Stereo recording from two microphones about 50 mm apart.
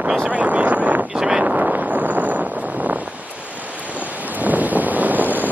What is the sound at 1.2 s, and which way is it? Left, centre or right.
Wind noise, centre.